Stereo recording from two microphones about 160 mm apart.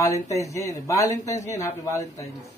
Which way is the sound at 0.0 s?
20° left (ahead or behind).